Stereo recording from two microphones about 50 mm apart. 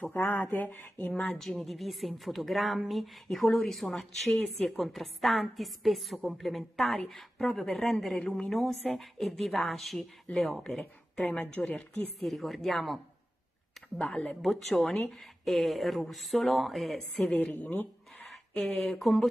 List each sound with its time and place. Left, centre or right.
0.2 s speech: left
1.2 s speech: centre
10.3 s speech: left
10.7 s speech: centre
11.5 s speech: left
12.2 s speech: centre
13.9 s speech: left
14.4 s speech: centre
17.6 s speech: left
18.8 s speech: centre